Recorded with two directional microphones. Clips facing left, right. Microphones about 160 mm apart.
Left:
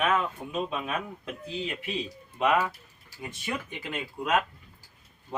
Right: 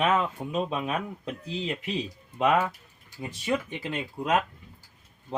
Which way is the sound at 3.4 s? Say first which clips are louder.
Right 7 dB; 30° right (ahead or behind).